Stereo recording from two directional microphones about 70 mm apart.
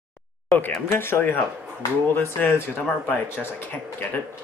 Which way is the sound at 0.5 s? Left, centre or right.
Left.